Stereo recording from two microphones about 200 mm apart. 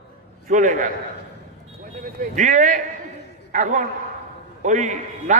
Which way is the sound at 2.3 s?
40° right (ahead or behind).